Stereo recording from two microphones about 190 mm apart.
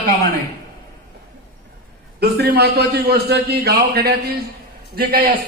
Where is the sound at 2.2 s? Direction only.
60° right (ahead or behind).